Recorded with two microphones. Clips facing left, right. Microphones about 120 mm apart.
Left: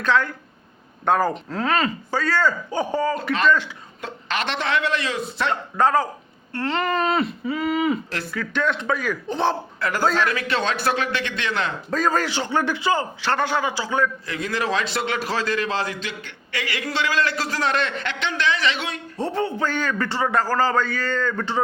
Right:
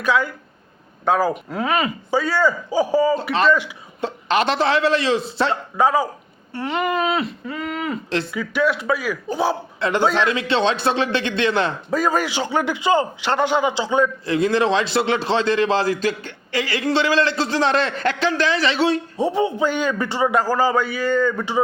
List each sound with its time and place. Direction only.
0.0 s a man's voice: 10° right (ahead or behind)
4.0 s a man's voice: 35° right (ahead or behind)
5.7 s a man's voice: 10° right (ahead or behind)
8.3 s a man's voice: 10° right (ahead or behind)
9.8 s a man's voice: 25° right (ahead or behind)
11.9 s a man's voice: 10° right (ahead or behind)
14.3 s a man's voice: 30° right (ahead or behind)
19.1 s a man's voice: 15° right (ahead or behind)